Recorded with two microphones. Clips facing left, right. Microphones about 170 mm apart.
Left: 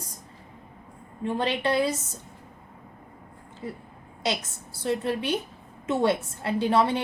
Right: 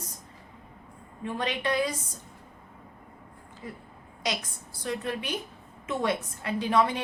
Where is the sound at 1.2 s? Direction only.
30° left (ahead or behind).